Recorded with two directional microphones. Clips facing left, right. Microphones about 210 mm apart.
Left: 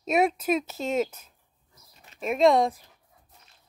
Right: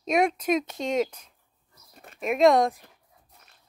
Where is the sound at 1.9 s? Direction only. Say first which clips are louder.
Right 8 dB; 50° right (ahead or behind).